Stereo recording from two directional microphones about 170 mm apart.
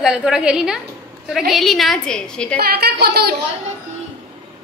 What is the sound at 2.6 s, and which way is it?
Speech, 65° right (ahead or behind).